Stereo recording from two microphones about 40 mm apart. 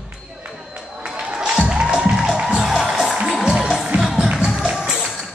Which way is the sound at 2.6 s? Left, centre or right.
Centre.